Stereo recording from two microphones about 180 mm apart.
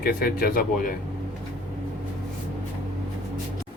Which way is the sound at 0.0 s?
55° left (ahead or behind).